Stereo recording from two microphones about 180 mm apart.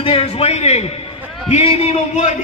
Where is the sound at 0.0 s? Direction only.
35° left (ahead or behind).